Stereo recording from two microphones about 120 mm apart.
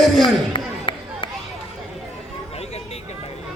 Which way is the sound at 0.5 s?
45° left (ahead or behind).